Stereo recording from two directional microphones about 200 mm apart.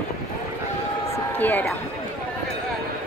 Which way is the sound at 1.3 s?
10° left (ahead or behind).